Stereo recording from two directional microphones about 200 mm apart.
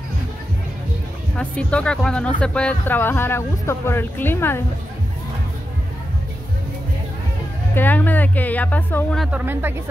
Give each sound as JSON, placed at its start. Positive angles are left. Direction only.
{"t": 1.3, "sound": "speech", "side_deg": 5}
{"t": 7.7, "sound": "speech", "side_deg": 10}